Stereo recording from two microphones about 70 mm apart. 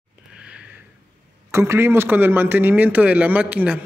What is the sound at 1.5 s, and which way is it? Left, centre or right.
A man's voice, right.